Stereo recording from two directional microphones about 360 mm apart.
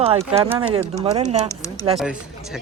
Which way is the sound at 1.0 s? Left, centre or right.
Centre.